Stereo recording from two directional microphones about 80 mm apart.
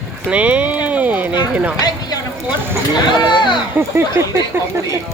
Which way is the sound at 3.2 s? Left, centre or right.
Left.